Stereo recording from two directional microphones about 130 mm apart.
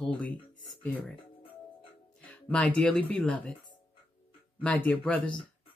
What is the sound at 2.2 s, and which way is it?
Speech, 10° left (ahead or behind).